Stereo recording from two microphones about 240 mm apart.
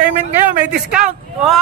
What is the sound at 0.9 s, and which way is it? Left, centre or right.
Speech, centre.